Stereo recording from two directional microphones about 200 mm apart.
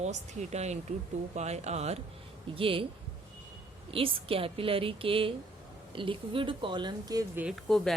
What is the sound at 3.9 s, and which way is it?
Speech, 25° right (ahead or behind).